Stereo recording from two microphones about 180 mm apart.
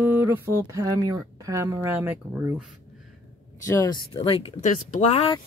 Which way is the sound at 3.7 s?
15° left (ahead or behind).